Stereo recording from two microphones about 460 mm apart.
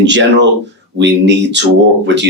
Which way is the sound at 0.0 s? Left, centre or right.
Right.